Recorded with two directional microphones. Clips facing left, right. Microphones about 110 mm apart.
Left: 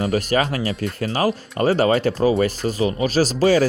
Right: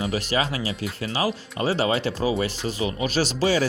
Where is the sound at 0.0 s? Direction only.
45° left (ahead or behind).